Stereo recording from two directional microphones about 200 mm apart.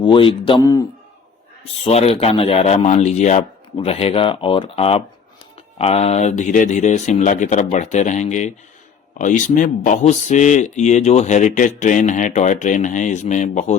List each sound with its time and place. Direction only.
0.0 s speech: 25° left (ahead or behind)
1.8 s speech: 30° left (ahead or behind)